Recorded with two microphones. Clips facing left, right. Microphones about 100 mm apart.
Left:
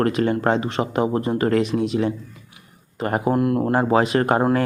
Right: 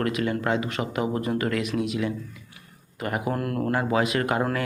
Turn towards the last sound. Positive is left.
turn(degrees=35)  # may be behind; listen again after turning